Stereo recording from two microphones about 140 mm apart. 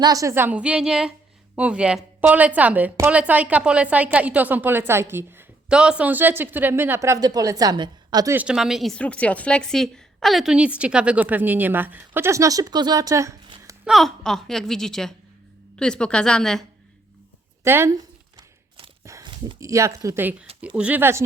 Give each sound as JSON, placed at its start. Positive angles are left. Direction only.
{"t": 0.0, "sound": "a woman's voice", "side_deg": -25}
{"t": 8.4, "sound": "a woman's voice", "side_deg": -5}
{"t": 13.8, "sound": "a woman's voice", "side_deg": 0}
{"t": 17.6, "sound": "a sound", "side_deg": -20}
{"t": 19.5, "sound": "a woman's voice", "side_deg": -20}